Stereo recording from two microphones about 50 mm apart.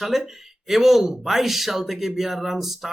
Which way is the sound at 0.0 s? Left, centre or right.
Centre.